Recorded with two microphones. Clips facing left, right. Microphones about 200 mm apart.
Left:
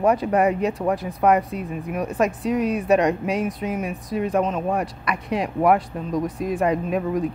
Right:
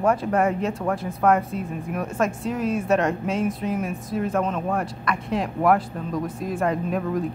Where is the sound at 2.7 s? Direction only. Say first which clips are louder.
Left 1 dB; 15° left (ahead or behind).